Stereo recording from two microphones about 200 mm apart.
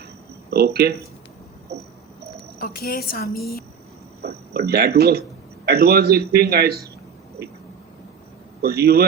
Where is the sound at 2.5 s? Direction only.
45° left (ahead or behind).